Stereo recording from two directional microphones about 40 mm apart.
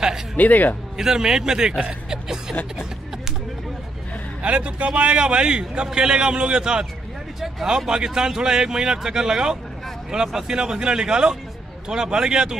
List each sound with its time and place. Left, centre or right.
0.4 s speech: left
0.9 s speech: centre
2.0 s a sound: centre
4.4 s a man's voice: right
7.3 s a sound: centre
7.7 s speech: centre